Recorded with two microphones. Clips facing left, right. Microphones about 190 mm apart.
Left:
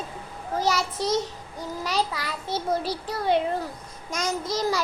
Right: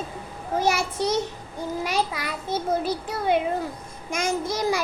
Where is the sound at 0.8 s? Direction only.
60° right (ahead or behind).